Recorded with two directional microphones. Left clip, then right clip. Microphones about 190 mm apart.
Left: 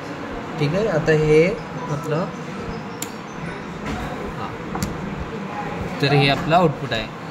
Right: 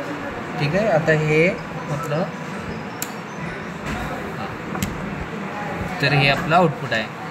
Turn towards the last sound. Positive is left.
turn(degrees=35)  # may be behind; listen again after turning